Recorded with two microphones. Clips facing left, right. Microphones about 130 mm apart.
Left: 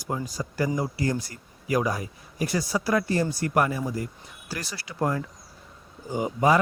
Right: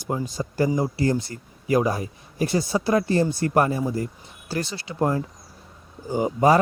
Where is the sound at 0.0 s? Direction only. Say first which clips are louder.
Right 3 dB; 25° right (ahead or behind).